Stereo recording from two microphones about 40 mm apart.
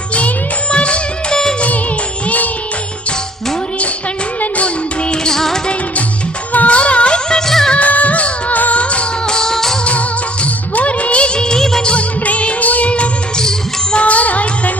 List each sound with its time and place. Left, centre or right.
0.1 s music: left
0.7 s music of bollywood: left
2.2 s music: left
4.4 s music: left; by 5.5 s centre
6.5 s music: left
7.3 s music of bollywood: centre
7.7 s music: left
8.8 s music: left
9.2 s music: centre
9.8 s music of bollywood: left; by 11.9 s centre
11.9 s music: left